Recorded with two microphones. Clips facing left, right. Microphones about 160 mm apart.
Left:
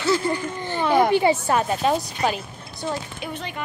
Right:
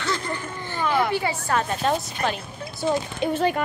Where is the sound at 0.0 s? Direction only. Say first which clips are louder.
Left 6 dB; 10° left (ahead or behind).